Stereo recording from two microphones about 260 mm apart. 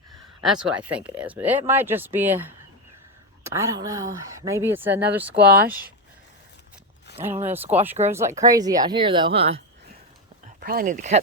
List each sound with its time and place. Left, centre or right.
0.4 s speech: centre
5.4 s speech: right
7.1 s a sound: left
7.5 s speech: centre
10.6 s speech: right